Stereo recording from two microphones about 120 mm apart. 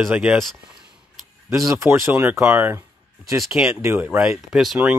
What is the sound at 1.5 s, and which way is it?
Speech, 25° right (ahead or behind).